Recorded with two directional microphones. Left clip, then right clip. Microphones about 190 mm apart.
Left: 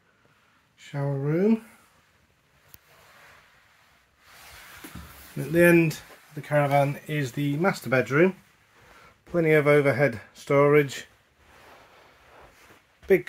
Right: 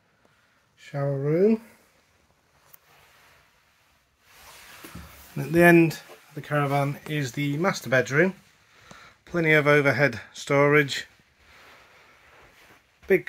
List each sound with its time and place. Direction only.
0.7 s speech: 5° right (ahead or behind)
5.4 s speech: 30° right (ahead or behind)
5.9 s speech: 5° right (ahead or behind)
13.0 s speech: 5° left (ahead or behind)